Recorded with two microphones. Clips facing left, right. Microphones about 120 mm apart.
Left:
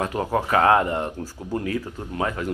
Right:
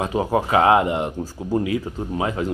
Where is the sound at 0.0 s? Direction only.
15° right (ahead or behind).